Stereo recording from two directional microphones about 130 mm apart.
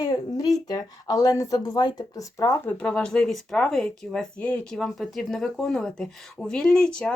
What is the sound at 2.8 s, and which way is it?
Speech, 5° left (ahead or behind).